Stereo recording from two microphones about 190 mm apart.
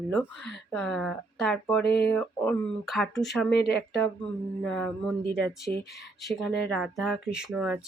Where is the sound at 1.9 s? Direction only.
60° left (ahead or behind).